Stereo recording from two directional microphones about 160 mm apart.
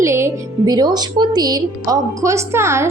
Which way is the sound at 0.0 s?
15° right (ahead or behind).